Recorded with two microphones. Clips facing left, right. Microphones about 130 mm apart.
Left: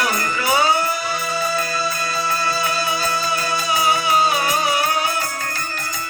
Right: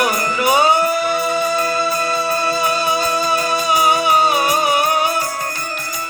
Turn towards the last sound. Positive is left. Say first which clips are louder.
# right 4 dB
turn(degrees=-25)  # may be behind; listen again after turning